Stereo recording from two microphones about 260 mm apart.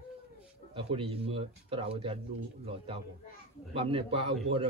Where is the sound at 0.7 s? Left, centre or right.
Right.